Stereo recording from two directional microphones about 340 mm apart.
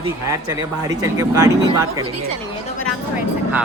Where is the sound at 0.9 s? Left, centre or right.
Centre.